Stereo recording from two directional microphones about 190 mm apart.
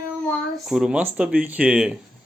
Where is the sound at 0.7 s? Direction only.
5° right (ahead or behind).